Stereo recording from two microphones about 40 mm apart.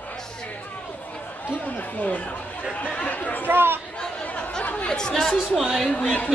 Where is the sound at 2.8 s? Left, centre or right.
Left.